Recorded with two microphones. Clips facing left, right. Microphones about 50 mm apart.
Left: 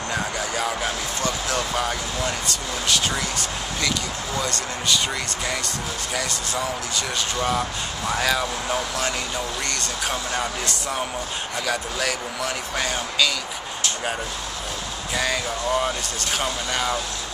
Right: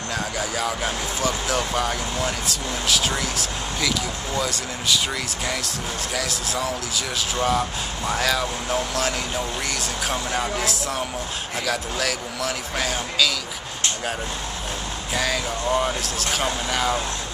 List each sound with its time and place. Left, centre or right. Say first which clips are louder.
0.1 s speech: even; centre
6.1 s speech: even; centre
15.1 s speech: even; centre